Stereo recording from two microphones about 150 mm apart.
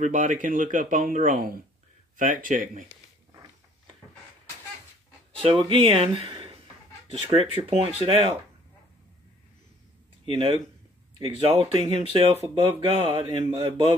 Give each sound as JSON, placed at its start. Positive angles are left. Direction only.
{"t": 0.0, "sound": "speech", "side_deg": -55}
{"t": 5.7, "sound": "speech", "side_deg": -40}
{"t": 10.2, "sound": "speech", "side_deg": -35}